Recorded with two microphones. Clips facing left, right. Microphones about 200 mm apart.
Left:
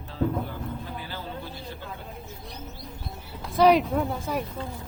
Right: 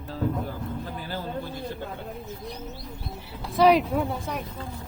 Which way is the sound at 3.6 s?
Centre (ahead or behind).